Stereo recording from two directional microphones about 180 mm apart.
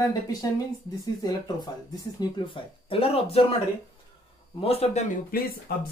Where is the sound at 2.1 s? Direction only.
25° left (ahead or behind).